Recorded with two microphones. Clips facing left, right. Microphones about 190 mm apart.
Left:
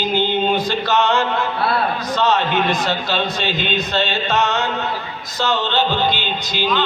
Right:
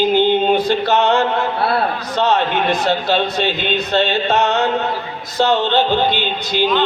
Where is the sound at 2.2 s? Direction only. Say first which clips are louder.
Right 2 dB; 60° right (ahead or behind).